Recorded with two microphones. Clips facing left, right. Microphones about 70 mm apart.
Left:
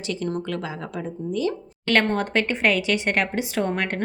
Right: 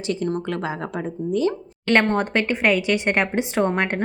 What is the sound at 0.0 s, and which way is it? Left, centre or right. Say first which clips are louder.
A woman's voice: right 3 dB; right.